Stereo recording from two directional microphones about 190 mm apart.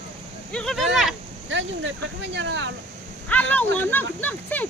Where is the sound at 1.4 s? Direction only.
80° right.